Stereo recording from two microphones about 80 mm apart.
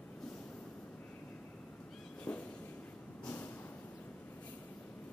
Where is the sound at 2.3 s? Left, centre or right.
Centre.